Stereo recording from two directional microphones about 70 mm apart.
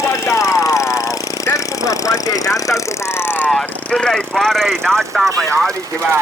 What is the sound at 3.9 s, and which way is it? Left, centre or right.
Speech, centre.